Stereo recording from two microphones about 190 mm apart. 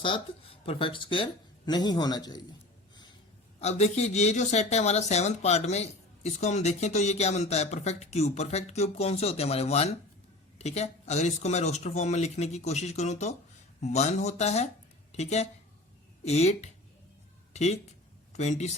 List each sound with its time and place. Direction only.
0.0 s speech: 30° left (ahead or behind)
3.6 s speech: 35° left (ahead or behind)
17.5 s a sound: 35° left (ahead or behind)
18.3 s speech: 35° left (ahead or behind)